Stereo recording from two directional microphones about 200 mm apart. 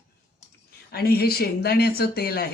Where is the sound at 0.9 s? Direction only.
50° left (ahead or behind).